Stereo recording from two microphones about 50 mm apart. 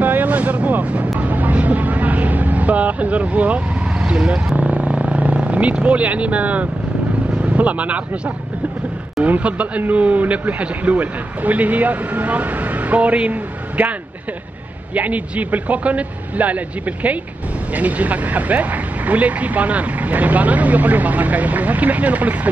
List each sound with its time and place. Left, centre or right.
0.0 s vehicle: right
4.1 s speech: centre
4.6 s vehicle: right
7.4 s speech: right
9.2 s speech: right
15.0 s speech: right